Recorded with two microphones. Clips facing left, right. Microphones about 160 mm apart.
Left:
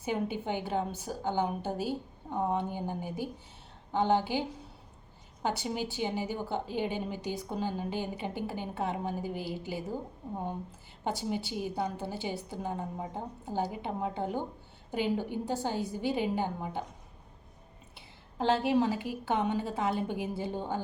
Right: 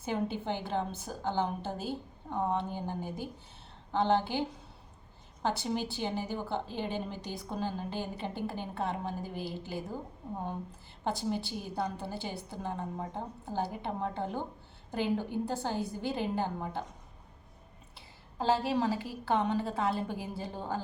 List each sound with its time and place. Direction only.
0.0 s a woman's voice: 15° left (ahead or behind)
11.0 s a woman's voice: 15° left (ahead or behind)
15.6 s a woman's voice: 15° left (ahead or behind)
17.9 s a woman's voice: 20° left (ahead or behind)